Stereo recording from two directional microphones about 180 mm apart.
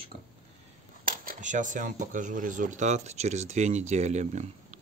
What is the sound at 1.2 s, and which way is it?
Speech, 45° right (ahead or behind).